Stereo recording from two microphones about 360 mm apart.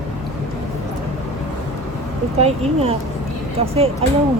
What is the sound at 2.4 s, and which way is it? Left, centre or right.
Speech, centre.